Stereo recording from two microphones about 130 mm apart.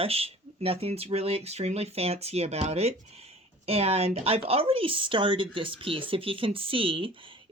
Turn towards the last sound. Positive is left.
turn(degrees=-45)  # may be behind; listen again after turning